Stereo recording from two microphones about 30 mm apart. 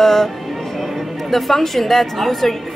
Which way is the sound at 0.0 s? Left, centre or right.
Centre.